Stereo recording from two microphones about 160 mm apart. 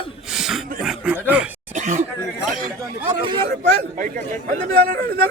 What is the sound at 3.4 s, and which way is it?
A man's voice, 60° right (ahead or behind).